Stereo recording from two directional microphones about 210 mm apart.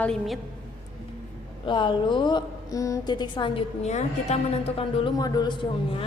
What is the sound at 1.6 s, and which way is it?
A woman's voice, 20° left (ahead or behind).